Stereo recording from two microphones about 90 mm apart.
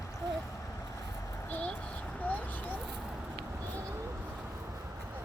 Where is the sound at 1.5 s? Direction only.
15° left (ahead or behind).